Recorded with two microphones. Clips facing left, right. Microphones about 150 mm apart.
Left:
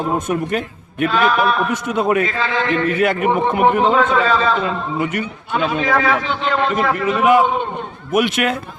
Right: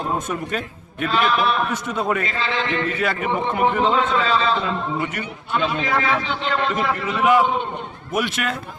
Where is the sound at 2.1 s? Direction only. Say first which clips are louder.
Left 5 dB; 60° left (ahead or behind).